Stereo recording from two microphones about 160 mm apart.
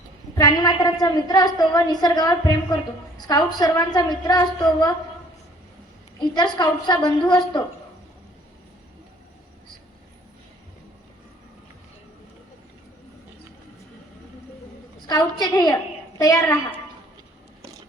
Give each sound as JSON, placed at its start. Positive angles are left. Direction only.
{"t": 0.3, "sound": "a woman's voice", "side_deg": 25}
{"t": 6.1, "sound": "a woman's voice", "side_deg": 25}
{"t": 15.0, "sound": "a woman's voice", "side_deg": 25}
{"t": 17.6, "sound": "a sound", "side_deg": -20}